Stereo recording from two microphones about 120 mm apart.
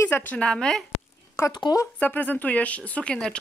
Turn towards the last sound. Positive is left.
turn(degrees=10)  # may be behind; listen again after turning